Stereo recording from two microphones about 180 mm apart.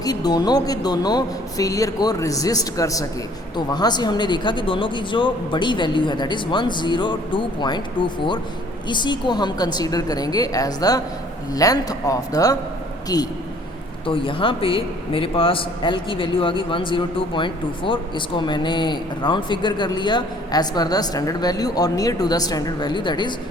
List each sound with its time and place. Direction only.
0.0 s speech: 20° left (ahead or behind)